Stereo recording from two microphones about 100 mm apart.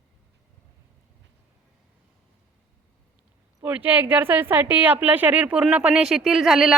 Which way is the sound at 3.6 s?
15° right (ahead or behind).